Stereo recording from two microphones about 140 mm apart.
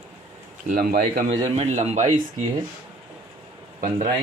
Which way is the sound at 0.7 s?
85° right.